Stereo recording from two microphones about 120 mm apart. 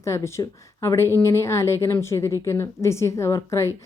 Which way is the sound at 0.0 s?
25° left (ahead or behind).